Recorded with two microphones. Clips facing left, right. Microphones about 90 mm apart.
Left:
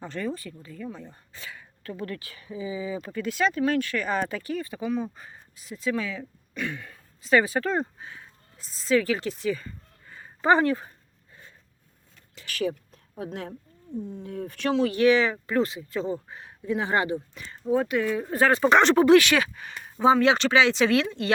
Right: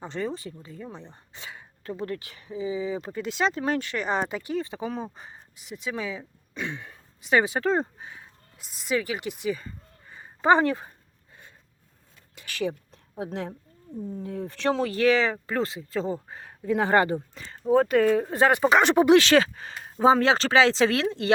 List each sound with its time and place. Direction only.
0.0 s speech: 20° right (ahead or behind)
8.5 s speech: 15° right (ahead or behind)
12.3 s a sound: 20° right (ahead or behind)
14.1 s speech: 35° right (ahead or behind)
18.3 s speech: 20° right (ahead or behind)
19.2 s speech: 30° right (ahead or behind)